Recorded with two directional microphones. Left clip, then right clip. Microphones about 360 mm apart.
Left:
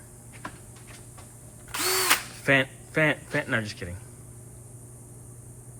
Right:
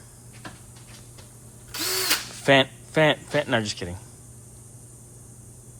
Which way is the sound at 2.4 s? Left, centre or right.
Centre.